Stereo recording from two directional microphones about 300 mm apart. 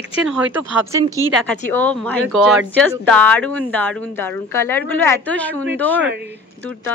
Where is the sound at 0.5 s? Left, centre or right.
Centre.